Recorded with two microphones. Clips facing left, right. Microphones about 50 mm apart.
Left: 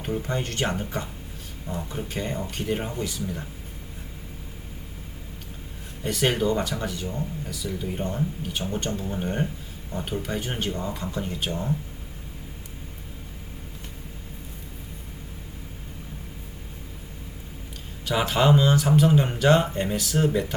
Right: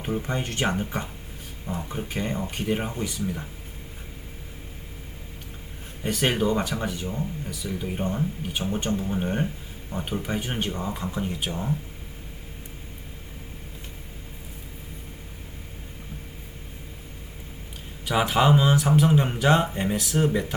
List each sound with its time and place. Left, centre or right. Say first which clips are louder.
0.0 s speech: even; centre
6.0 s speech: even; centre
18.0 s speech: right 1 dB; centre